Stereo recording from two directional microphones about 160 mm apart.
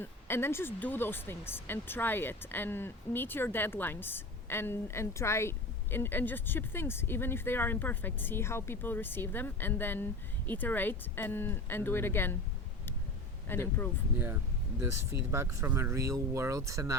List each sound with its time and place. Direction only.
0.0 s speech: 15° left (ahead or behind)
13.5 s speech: 15° left (ahead or behind)
14.8 s speech: 15° right (ahead or behind)